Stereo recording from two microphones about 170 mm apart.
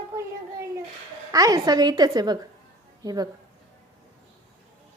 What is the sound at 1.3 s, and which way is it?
A woman's voice, 20° right (ahead or behind).